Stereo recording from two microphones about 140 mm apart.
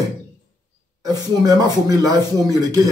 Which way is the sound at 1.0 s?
25° right (ahead or behind).